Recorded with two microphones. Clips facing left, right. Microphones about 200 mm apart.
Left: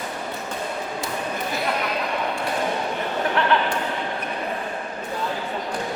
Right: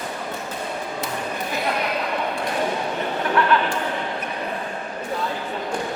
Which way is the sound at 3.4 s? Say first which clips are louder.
Right 3 dB; 25° left (ahead or behind).